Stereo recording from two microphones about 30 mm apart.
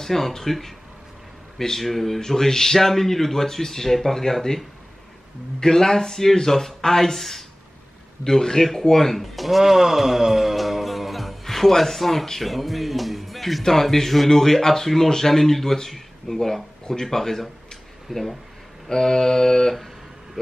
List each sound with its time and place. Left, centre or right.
0.0 s speech: centre
1.8 s speech: centre
5.6 s speech: centre
10.5 s music: centre
11.4 s speech: centre
18.9 s mantra: centre